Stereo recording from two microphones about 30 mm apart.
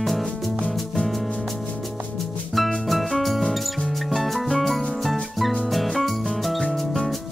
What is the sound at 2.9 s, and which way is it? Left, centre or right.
Music, centre.